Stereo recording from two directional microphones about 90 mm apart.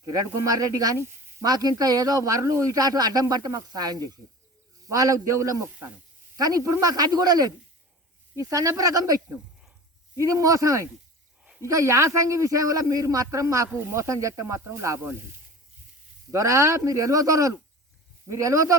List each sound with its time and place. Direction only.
0.0 s a man's voice: 40° right (ahead or behind)
0.9 s sizzle: 30° right (ahead or behind)
1.5 s a man's voice: 45° right (ahead or behind)
16.3 s a man's voice: 35° right (ahead or behind)